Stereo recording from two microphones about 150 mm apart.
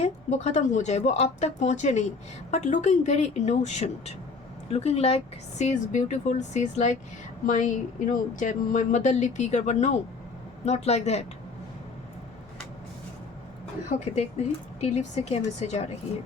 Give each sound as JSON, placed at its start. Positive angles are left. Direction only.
{"t": 0.0, "sound": "speech", "side_deg": 50}
{"t": 13.9, "sound": "speech", "side_deg": 50}